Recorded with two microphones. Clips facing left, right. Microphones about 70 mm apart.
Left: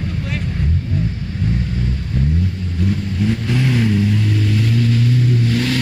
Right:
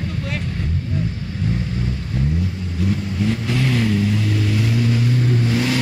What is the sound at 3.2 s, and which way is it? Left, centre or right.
Vehicle, centre.